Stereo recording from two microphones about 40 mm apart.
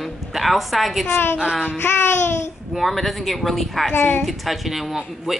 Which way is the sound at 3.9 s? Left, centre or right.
Left.